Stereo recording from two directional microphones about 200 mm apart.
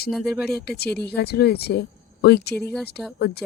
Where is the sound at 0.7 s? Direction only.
55° left (ahead or behind).